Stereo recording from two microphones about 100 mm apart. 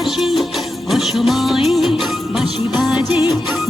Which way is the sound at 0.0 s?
Centre (ahead or behind).